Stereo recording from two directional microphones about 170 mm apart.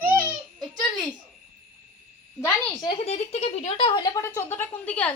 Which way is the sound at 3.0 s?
40° left (ahead or behind).